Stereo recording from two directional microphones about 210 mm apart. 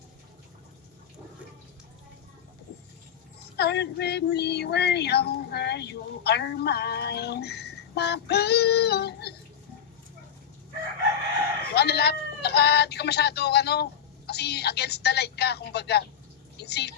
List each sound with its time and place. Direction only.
3.6 s female singing: 50° left (ahead or behind)
11.7 s speech: 50° left (ahead or behind)
14.3 s female singing: 50° left (ahead or behind)